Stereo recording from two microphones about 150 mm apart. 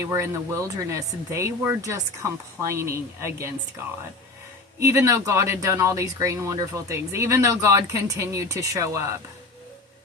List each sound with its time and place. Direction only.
0.0 s speech: 20° right (ahead or behind)
4.8 s speech: 20° right (ahead or behind)